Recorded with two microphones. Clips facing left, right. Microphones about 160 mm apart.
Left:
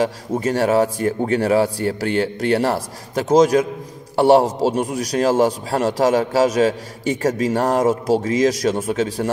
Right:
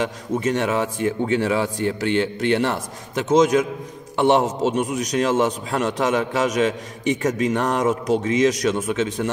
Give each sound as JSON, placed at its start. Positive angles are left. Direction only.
{"t": 0.0, "sound": "a man's voice", "side_deg": 35}